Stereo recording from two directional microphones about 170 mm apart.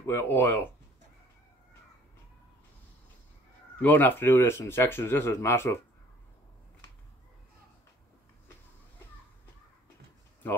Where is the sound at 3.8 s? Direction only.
10° left (ahead or behind).